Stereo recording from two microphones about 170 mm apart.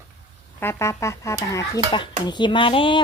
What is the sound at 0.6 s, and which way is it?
Speech, 15° left (ahead or behind).